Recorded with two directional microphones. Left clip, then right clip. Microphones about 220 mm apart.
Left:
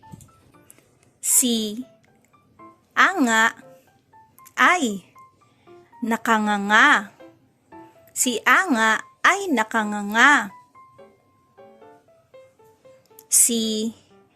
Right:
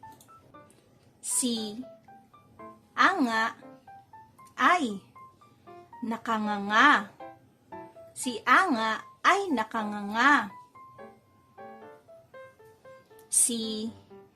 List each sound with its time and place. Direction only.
1.2 s a sound: 30° left (ahead or behind)
2.9 s music: 30° left (ahead or behind)
4.5 s speech: 30° left (ahead or behind)
6.1 s speech: 30° left (ahead or behind)
8.2 s speech: 30° left (ahead or behind)
13.2 s speech: 30° left (ahead or behind)